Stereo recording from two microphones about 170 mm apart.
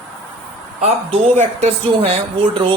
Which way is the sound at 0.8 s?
40° right (ahead or behind).